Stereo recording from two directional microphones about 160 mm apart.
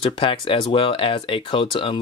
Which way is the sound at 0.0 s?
35° left (ahead or behind).